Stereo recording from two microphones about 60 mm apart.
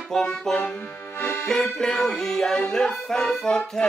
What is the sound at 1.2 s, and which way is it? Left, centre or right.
Accordion, left.